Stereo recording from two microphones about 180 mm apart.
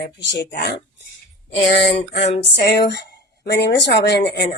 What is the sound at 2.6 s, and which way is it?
Speech, 65° left (ahead or behind).